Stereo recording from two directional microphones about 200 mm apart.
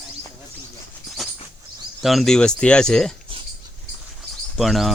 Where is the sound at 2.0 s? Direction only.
Centre (ahead or behind).